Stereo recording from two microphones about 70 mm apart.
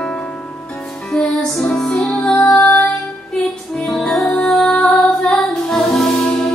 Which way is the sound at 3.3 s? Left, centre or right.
Centre.